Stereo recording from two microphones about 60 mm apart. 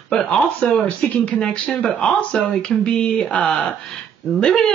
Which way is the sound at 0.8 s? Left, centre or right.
Left.